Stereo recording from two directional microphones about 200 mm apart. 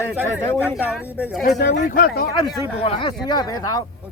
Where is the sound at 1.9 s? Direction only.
45° left (ahead or behind).